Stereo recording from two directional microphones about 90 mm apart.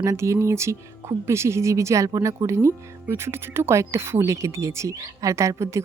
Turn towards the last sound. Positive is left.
turn(degrees=-35)  # may be behind; listen again after turning